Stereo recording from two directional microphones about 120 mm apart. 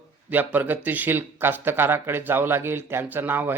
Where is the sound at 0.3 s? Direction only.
15° right (ahead or behind).